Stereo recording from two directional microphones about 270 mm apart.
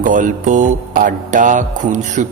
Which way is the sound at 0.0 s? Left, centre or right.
Right.